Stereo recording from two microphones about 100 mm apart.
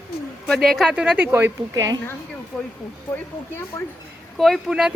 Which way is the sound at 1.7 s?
40° right (ahead or behind).